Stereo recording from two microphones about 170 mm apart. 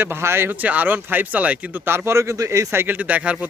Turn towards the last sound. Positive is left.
turn(degrees=-10)  # may be behind; listen again after turning